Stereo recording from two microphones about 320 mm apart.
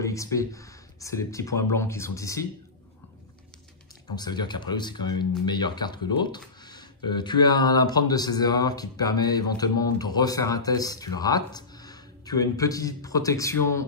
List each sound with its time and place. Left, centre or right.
0.0 s speech: centre
4.1 s speech: centre